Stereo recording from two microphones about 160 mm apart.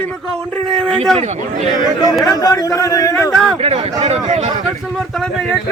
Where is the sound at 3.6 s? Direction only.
40° right (ahead or behind).